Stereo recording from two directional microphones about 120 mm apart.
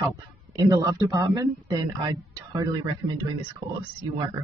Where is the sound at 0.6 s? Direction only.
30° right (ahead or behind).